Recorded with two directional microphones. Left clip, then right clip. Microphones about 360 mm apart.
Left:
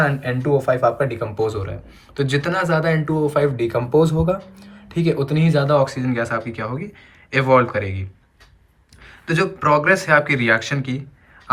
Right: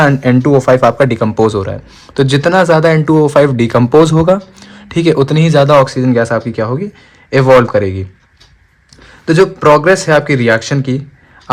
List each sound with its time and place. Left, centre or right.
0.0 s speech: centre
9.2 s speech: centre